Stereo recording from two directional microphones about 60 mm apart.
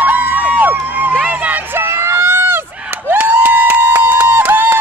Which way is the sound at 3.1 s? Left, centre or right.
Right.